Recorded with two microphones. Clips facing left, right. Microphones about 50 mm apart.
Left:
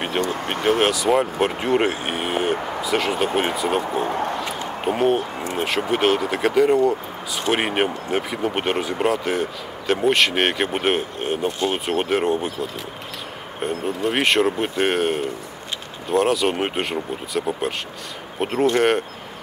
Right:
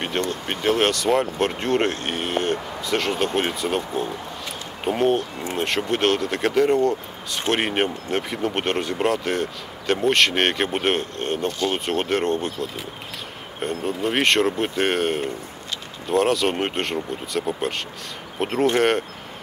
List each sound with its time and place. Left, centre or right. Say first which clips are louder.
0.0 s speech: left 2 dB; centre
4.1 s a sound: left 9 dB; left
4.8 s speech: left 1 dB; centre